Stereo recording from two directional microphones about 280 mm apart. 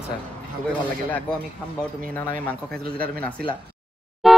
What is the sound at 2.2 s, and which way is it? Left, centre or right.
Speech, centre.